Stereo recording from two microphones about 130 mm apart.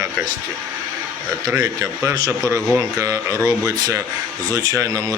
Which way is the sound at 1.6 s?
25° right (ahead or behind).